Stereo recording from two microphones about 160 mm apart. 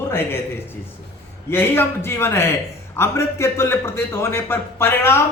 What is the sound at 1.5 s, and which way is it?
A man's voice, 15° left (ahead or behind).